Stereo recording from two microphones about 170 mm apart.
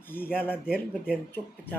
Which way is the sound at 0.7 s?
5° right (ahead or behind).